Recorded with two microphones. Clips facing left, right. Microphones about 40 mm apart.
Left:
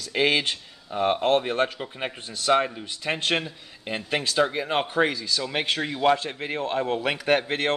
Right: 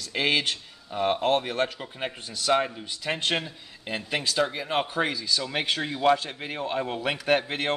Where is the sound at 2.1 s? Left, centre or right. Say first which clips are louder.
Left 3 dB; left.